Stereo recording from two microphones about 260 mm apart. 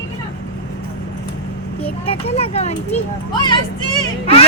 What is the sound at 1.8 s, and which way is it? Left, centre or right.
A child's voice, left.